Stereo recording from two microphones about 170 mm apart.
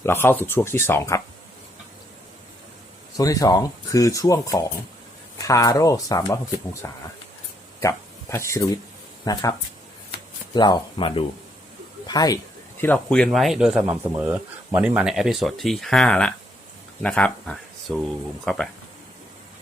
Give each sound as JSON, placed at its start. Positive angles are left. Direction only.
{"t": 0.0, "sound": "speech", "side_deg": 15}
{"t": 3.2, "sound": "speech", "side_deg": 20}
{"t": 12.8, "sound": "speech", "side_deg": 10}